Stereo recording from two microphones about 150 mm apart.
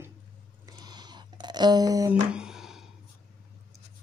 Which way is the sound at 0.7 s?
25° right (ahead or behind).